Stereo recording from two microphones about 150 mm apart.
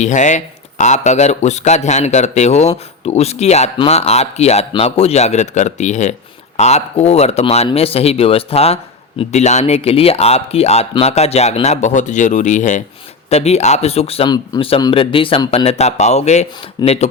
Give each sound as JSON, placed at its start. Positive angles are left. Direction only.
{"t": 0.0, "sound": "speech", "side_deg": 55}
{"t": 14.3, "sound": "speech", "side_deg": 25}